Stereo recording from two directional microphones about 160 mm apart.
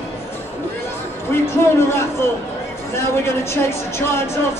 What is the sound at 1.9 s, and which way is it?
Speech, 15° left (ahead or behind).